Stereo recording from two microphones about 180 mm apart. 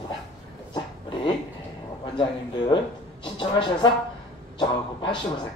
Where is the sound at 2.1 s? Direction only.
30° left (ahead or behind).